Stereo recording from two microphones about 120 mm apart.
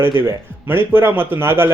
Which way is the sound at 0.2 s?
20° right (ahead or behind).